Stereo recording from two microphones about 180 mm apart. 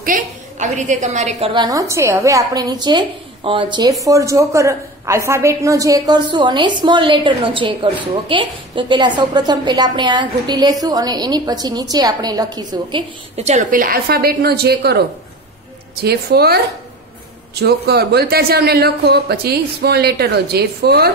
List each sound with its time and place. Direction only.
0.0 s a woman's voice: 45° right (ahead or behind); by 13.0 s 20° right (ahead or behind)
13.4 s speech: 40° right (ahead or behind); by 16.5 s 60° right (ahead or behind)
17.6 s speech: 60° right (ahead or behind)